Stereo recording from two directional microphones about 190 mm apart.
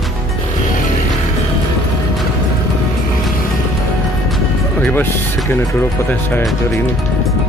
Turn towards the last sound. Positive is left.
turn(degrees=10)  # may be behind; listen again after turning